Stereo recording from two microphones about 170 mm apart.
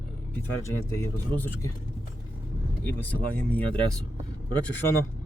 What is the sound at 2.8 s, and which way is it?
Speech, 15° left (ahead or behind).